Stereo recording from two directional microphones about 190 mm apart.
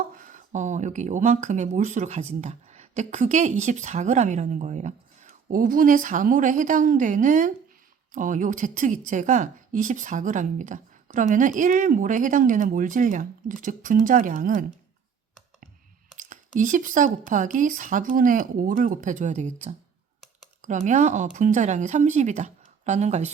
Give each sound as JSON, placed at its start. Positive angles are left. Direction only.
{"t": 0.2, "sound": "a woman's voice", "side_deg": -40}
{"t": 16.1, "sound": "a woman's voice", "side_deg": -45}